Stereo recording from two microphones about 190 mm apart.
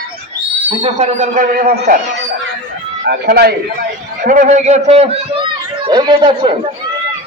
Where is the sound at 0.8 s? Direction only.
35° right (ahead or behind).